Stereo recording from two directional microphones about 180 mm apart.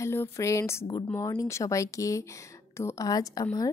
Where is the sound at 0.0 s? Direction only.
15° left (ahead or behind).